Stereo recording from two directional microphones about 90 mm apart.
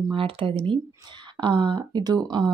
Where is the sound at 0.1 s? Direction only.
75° right (ahead or behind).